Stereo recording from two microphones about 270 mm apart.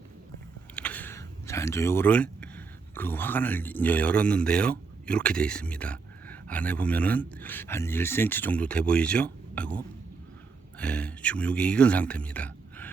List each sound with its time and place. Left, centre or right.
0.8 s speech: centre
10.8 s speech: centre